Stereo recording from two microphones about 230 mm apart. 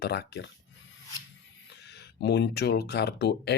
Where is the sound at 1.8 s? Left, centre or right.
Left.